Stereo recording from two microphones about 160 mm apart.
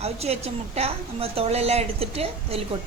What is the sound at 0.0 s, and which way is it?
A woman's voice, 40° right (ahead or behind).